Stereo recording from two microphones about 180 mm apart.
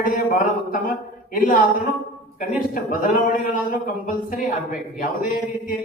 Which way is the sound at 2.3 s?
50° left (ahead or behind).